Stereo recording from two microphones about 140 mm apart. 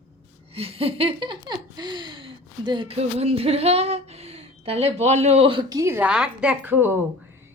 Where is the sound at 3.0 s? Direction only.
50° right (ahead or behind).